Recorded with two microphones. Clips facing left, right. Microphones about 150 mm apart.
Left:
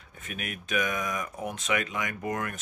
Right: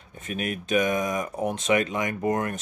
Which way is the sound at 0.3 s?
30° right (ahead or behind).